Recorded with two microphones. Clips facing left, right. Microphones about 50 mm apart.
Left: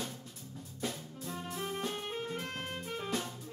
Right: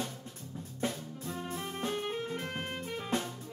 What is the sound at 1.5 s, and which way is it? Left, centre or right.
Music, centre.